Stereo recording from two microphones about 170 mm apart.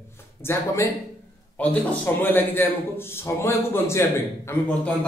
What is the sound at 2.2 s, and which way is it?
A man's voice, 10° left (ahead or behind).